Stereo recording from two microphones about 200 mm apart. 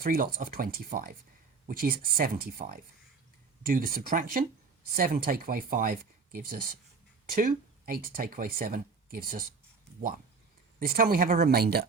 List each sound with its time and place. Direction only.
0.0 s speech: 45° right (ahead or behind)
10.8 s speech: 45° right (ahead or behind)